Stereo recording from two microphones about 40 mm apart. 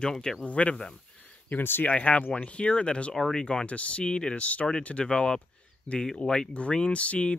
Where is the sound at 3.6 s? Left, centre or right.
Left.